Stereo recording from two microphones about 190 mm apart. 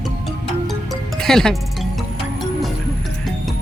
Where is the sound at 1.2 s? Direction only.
5° left (ahead or behind).